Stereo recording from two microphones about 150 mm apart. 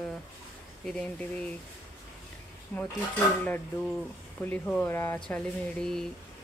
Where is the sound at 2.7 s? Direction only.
10° left (ahead or behind).